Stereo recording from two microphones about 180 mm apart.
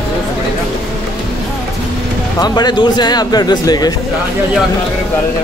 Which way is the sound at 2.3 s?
20° left (ahead or behind).